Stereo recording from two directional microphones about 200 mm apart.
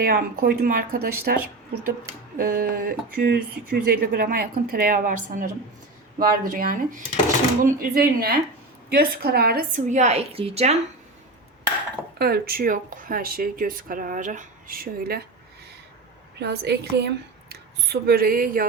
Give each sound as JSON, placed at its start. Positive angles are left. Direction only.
{"t": 0.0, "sound": "a woman's voice", "side_deg": -45}
{"t": 12.2, "sound": "speech", "side_deg": -50}
{"t": 16.4, "sound": "a woman's voice", "side_deg": -55}